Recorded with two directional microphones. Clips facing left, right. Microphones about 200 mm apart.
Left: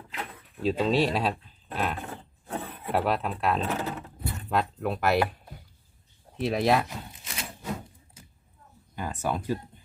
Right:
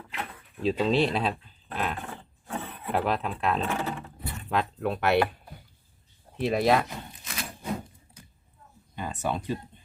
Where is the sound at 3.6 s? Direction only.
40° left (ahead or behind).